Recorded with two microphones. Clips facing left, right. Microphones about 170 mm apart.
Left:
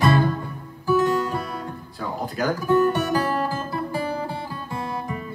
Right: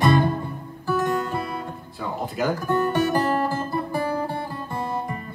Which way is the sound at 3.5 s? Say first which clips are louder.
Right 1 dB; 55° right (ahead or behind).